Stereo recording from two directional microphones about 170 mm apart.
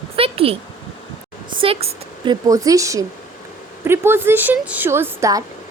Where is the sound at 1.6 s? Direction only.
35° right (ahead or behind).